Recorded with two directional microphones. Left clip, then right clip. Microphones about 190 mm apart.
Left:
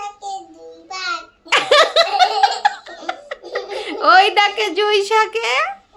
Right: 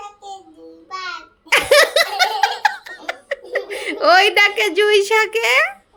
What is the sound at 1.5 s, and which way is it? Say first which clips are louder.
Laughter: even; 5° right (ahead or behind).